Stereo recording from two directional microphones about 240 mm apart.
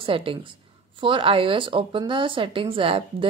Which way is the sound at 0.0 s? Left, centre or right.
Right.